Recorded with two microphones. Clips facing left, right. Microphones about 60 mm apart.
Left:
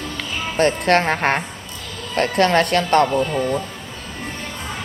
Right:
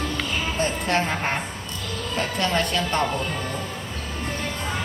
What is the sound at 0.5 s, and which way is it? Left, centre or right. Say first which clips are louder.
Speech: left 9 dB; left.